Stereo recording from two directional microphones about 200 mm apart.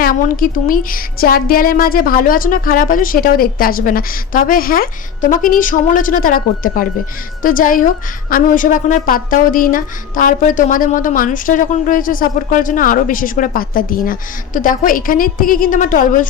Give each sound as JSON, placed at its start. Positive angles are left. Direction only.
{"t": 0.0, "sound": "a woman's voice", "side_deg": 45}